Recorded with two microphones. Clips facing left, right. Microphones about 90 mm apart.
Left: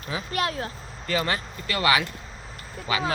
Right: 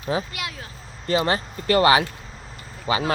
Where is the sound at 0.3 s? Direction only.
40° left (ahead or behind).